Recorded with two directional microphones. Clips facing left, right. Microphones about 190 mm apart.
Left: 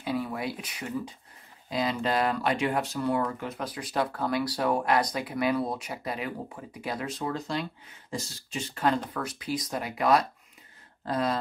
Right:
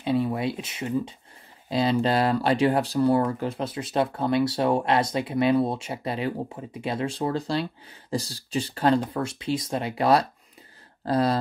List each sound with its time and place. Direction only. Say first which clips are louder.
0.0 s speech: right 6 dB; 25° right (ahead or behind)